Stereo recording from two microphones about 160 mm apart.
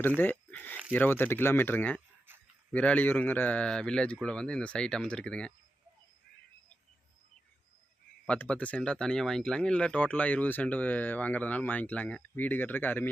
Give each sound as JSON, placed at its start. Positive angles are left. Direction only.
{"t": 0.2, "sound": "speech", "side_deg": 10}
{"t": 8.3, "sound": "speech", "side_deg": 10}